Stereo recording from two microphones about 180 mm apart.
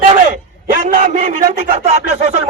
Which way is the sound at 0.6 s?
50° right (ahead or behind).